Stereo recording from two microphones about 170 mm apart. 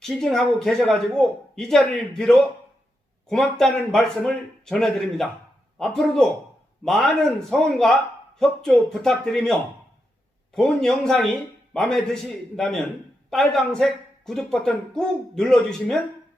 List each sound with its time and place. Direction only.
0.0 s speech: centre (ahead or behind)